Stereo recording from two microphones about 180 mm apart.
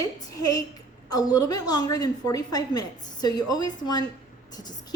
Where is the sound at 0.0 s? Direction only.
20° left (ahead or behind).